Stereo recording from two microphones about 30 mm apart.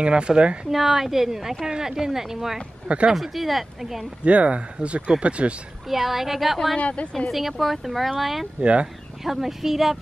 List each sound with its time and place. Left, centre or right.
0.0 s a woman's voice: right
0.7 s speech: centre
4.2 s speech: right
5.9 s speech: centre
6.8 s speech: left
7.2 s speech: centre
8.5 s a woman's voice: right
9.2 s speech: centre